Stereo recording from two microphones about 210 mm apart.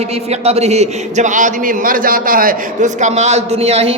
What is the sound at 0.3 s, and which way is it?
A man's voice, 30° right (ahead or behind).